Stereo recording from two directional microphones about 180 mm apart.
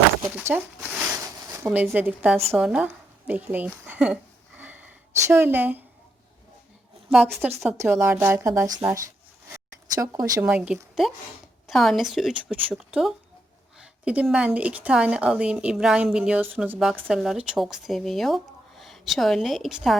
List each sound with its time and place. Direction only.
0.3 s a sound: 10° right (ahead or behind)
2.5 s a woman's voice: 5° right (ahead or behind)
7.1 s a woman's voice: 5° right (ahead or behind)
10.0 s speech: 20° right (ahead or behind)
10.4 s a woman's voice: 5° right (ahead or behind)